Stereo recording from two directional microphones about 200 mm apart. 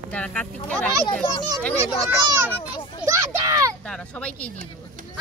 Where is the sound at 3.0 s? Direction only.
15° right (ahead or behind).